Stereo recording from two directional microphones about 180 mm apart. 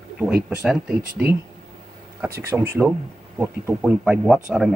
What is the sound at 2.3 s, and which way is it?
Speech, 15° right (ahead or behind).